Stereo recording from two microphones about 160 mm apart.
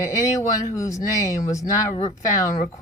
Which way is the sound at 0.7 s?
20° left (ahead or behind).